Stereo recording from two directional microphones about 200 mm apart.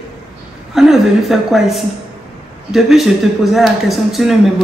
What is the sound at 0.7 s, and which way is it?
Speech, centre (ahead or behind).